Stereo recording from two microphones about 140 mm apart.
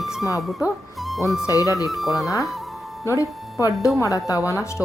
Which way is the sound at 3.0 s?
20° left (ahead or behind).